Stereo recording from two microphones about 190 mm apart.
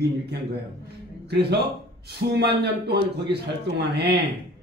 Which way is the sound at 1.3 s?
60° right (ahead or behind).